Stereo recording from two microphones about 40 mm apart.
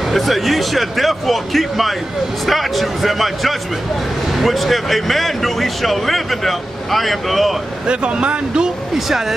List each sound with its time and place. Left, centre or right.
0.0 s speech: centre
7.8 s speech: right
8.9 s speech: centre